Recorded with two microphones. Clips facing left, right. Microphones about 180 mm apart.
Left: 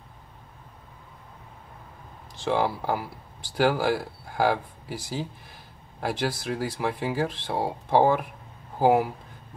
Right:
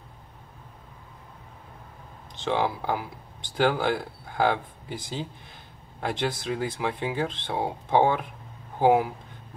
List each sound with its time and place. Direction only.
2.4 s speech: 10° left (ahead or behind)